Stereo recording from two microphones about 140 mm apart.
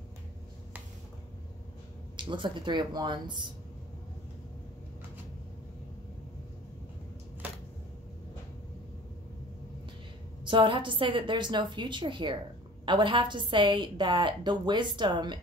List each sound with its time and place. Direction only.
2.1 s a woman's voice: 35° right (ahead or behind)
10.4 s a woman's voice: 35° right (ahead or behind)